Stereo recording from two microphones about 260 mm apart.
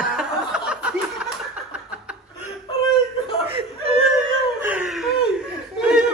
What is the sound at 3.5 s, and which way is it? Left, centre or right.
Whimper, right.